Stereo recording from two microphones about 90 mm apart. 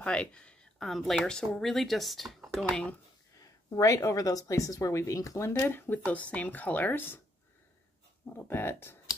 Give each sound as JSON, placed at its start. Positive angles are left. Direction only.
{"t": 0.0, "sound": "a sound", "side_deg": 10}
{"t": 0.8, "sound": "speech", "side_deg": 0}
{"t": 3.3, "sound": "a woman's voice", "side_deg": 40}
{"t": 5.6, "sound": "speech", "side_deg": 20}
{"t": 8.4, "sound": "speech", "side_deg": 25}